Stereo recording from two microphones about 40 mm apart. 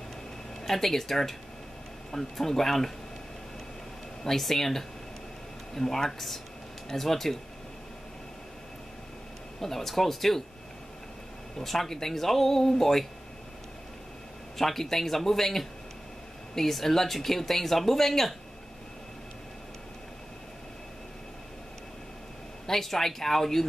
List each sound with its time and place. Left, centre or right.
0.7 s speech: centre
4.2 s speech: centre
9.6 s speech: centre
11.5 s speech: centre
14.6 s speech: centre
22.7 s speech: centre